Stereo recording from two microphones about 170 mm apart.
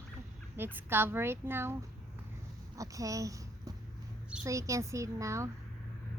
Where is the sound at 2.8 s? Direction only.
20° right (ahead or behind).